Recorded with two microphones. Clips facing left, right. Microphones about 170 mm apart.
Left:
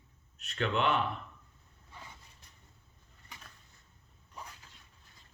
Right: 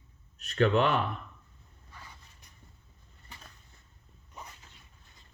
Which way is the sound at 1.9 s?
20° left (ahead or behind).